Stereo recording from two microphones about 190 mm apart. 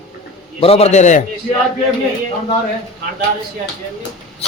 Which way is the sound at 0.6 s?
30° left (ahead or behind).